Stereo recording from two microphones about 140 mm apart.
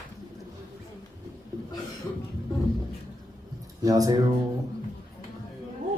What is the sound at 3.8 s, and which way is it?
Speech, 25° right (ahead or behind).